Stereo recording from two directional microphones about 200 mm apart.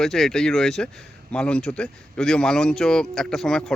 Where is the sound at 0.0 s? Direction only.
Centre (ahead or behind).